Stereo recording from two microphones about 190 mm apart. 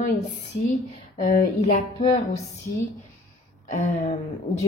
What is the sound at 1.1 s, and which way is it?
Speech, 35° left (ahead or behind).